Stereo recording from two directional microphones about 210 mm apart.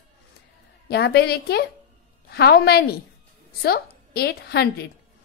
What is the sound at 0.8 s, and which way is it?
A woman's voice, 50° left (ahead or behind).